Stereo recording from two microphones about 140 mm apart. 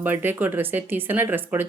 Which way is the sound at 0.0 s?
15° right (ahead or behind).